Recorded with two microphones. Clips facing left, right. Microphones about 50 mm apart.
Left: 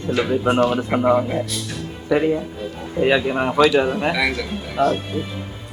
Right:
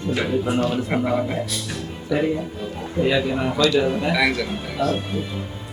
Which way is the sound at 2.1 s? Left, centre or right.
Left.